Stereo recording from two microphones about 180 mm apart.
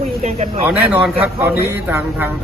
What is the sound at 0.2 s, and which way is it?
Speech, 40° right (ahead or behind).